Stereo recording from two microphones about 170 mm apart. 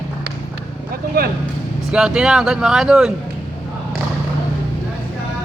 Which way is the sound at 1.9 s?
5° right (ahead or behind).